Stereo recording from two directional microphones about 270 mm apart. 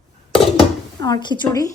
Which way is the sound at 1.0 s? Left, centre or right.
Centre.